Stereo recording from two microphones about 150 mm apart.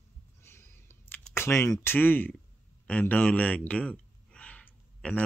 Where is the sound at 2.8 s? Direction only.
10° left (ahead or behind).